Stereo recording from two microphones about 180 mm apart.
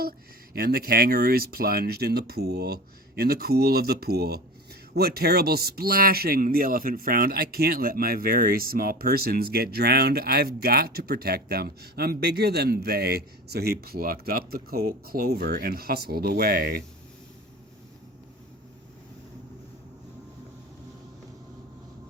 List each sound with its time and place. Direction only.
0.5 s speech: 55° right (ahead or behind)